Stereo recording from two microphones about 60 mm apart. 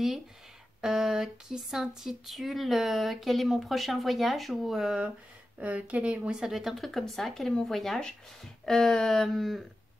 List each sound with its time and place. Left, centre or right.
0.7 s speech: centre
5.6 s speech: right
6.4 s speech: centre